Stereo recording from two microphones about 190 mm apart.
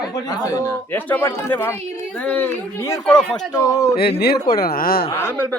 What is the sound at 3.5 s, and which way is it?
Speech, 15° left (ahead or behind).